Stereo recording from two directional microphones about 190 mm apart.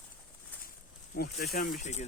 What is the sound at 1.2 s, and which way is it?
Speech, 50° left (ahead or behind).